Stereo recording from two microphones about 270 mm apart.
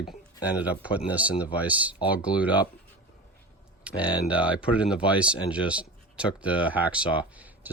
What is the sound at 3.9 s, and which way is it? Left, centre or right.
Speech, centre.